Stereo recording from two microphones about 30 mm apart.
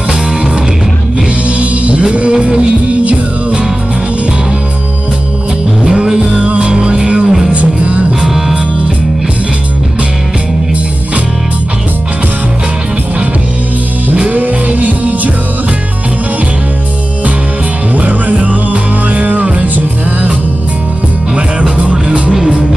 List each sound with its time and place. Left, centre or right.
1.6 s music: right
6.2 s music: right
7.5 s music: right
8.3 s music: centre
14.3 s music: right
17.9 s music: right
18.3 s music: right
21.6 s music: right